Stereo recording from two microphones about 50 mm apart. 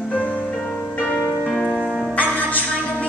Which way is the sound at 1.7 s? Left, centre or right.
Centre.